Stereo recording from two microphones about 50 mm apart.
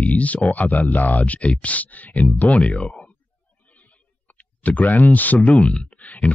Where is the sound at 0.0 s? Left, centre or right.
Left.